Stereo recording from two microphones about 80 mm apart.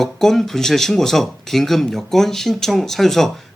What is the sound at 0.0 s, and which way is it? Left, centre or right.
Speech, centre.